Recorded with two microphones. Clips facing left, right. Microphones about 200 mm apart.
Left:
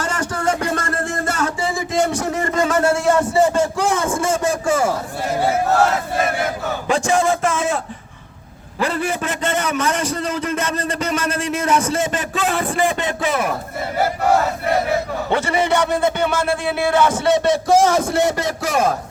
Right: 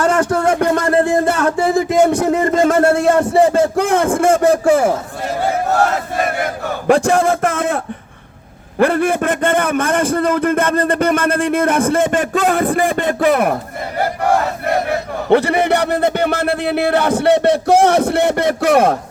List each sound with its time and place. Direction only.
0.0 s a sound: 60° right (ahead or behind)
6.8 s a man's voice: 60° right (ahead or behind)
8.8 s a man's voice: 55° right (ahead or behind)
15.3 s a man's voice: 60° right (ahead or behind)